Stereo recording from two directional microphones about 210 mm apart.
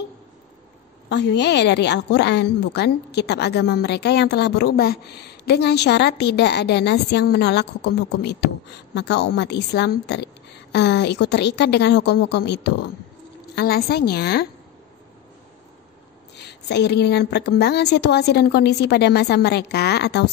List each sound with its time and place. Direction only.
1.0 s a woman's voice: 55° left (ahead or behind)
16.3 s a woman's voice: 55° left (ahead or behind)